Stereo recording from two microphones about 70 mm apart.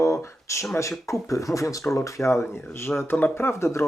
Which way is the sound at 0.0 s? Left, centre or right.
Left.